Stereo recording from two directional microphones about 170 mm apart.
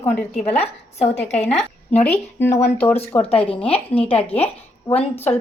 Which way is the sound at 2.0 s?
10° left (ahead or behind).